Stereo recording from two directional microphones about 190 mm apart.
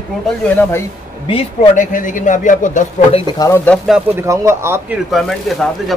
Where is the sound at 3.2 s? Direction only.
20° left (ahead or behind).